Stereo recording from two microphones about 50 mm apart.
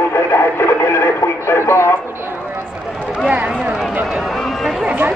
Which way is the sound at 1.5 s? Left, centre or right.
Left.